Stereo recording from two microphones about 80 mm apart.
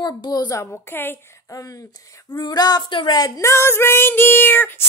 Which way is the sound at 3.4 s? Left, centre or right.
Left.